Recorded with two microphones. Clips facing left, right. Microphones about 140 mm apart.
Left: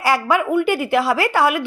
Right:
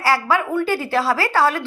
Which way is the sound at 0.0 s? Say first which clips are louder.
Left 1 dB; 15° left (ahead or behind).